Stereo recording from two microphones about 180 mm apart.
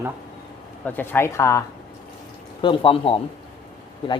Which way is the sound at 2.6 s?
25° left (ahead or behind).